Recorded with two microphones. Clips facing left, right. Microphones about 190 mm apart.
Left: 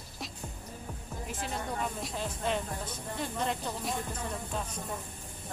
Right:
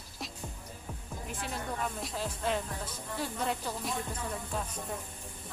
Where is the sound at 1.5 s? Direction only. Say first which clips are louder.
Left 1 dB; centre (ahead or behind).